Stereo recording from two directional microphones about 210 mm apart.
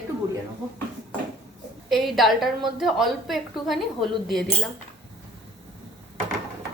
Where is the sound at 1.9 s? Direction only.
Centre (ahead or behind).